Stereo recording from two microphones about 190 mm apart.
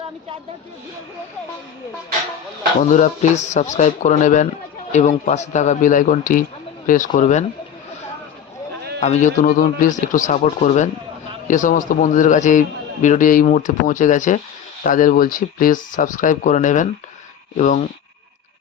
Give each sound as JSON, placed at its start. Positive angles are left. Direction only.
{"t": 2.8, "sound": "a man's voice", "side_deg": 40}
{"t": 9.0, "sound": "a man's voice", "side_deg": 35}